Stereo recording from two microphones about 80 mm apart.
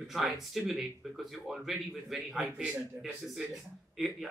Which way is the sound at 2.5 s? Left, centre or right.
Centre.